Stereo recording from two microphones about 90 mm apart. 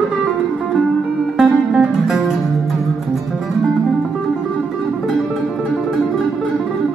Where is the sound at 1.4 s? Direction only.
10° right (ahead or behind).